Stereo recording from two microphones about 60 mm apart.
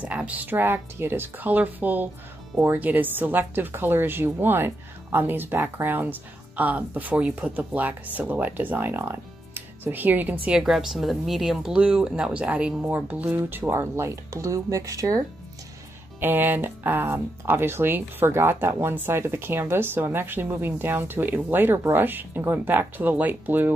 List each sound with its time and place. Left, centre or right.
0.0 s speech: right
10.5 s speech: centre
11.7 s speech: centre; by 13.7 s right
13.7 s speech: right
16.2 s speech: right